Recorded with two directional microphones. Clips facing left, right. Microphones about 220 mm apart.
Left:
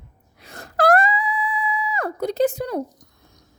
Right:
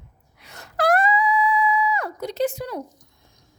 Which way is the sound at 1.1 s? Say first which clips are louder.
Right 4 dB; 30° left (ahead or behind).